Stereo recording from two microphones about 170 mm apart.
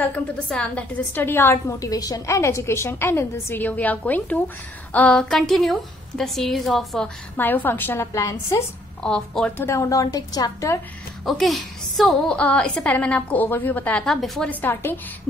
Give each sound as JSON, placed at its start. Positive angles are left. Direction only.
{"t": 0.0, "sound": "a woman's voice", "side_deg": 10}
{"t": 7.3, "sound": "a woman's voice", "side_deg": 10}
{"t": 9.0, "sound": "a woman's voice", "side_deg": 5}
{"t": 11.2, "sound": "a woman's voice", "side_deg": 0}